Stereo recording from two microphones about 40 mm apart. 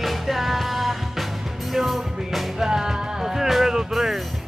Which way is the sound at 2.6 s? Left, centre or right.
Centre.